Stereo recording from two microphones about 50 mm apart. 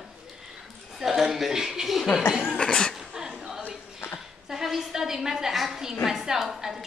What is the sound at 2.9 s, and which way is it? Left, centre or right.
A woman's voice, centre.